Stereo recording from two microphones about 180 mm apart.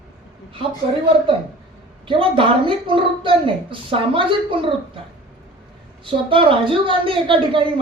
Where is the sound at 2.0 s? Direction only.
30° right (ahead or behind).